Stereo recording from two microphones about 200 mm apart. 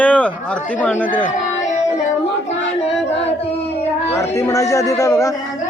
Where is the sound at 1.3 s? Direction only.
35° left (ahead or behind).